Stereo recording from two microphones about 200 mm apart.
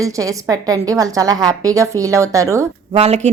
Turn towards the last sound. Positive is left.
turn(degrees=-30)  # may be behind; listen again after turning